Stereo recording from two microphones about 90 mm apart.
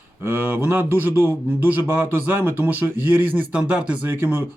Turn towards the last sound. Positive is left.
turn(degrees=-20)  # may be behind; listen again after turning